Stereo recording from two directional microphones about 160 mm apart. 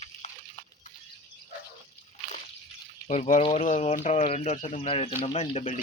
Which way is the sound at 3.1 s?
50° left (ahead or behind).